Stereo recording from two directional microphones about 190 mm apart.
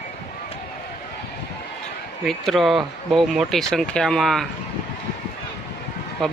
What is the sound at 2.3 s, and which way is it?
Speech, centre (ahead or behind).